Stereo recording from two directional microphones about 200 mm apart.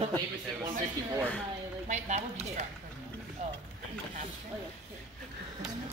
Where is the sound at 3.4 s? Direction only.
35° right (ahead or behind).